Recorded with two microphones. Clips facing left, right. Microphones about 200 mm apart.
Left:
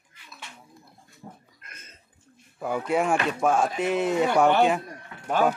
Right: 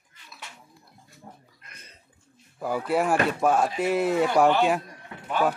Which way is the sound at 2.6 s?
5° right (ahead or behind).